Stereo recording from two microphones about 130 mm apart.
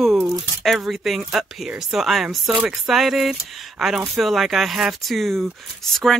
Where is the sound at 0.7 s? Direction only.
Centre (ahead or behind).